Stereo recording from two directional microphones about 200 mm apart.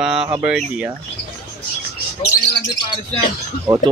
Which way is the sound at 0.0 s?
5° right (ahead or behind).